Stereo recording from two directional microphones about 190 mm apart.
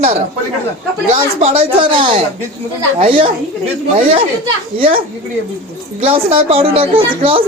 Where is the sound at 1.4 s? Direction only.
30° right (ahead or behind).